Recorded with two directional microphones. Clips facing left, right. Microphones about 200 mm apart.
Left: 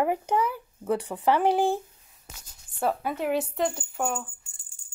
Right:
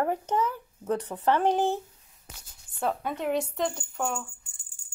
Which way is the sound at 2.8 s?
5° left (ahead or behind).